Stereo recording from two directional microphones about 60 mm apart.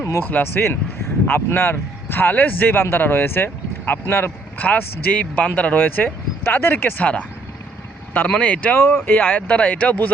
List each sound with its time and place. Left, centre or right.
0.0 s a sound: left
0.3 s speech: left
1.3 s speech: left
4.6 s speech: left
7.0 s speech: left
8.8 s speech: left